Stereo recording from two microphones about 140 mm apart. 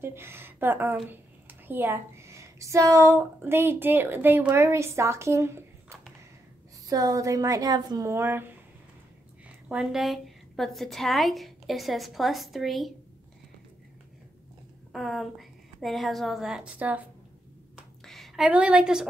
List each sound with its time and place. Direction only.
0.0 s a woman's voice: 15° right (ahead or behind)
9.7 s a woman's voice: 5° right (ahead or behind)
14.9 s a woman's voice: centre (ahead or behind)
18.0 s a woman's voice: centre (ahead or behind)